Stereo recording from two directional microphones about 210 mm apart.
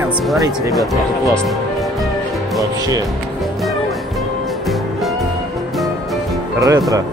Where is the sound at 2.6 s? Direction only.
15° right (ahead or behind).